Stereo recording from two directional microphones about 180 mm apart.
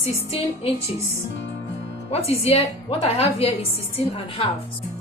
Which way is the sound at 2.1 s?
35° left (ahead or behind).